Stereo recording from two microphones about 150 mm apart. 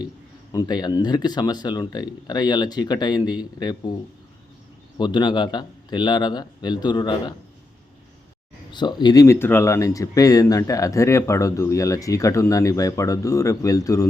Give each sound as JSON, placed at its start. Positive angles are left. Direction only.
{"t": 0.5, "sound": "speech", "side_deg": 30}
{"t": 4.9, "sound": "speech", "side_deg": 30}
{"t": 8.7, "sound": "speech", "side_deg": 30}